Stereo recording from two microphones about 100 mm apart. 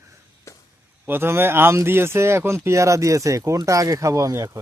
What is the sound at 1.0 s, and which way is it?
A man's voice, 25° right (ahead or behind).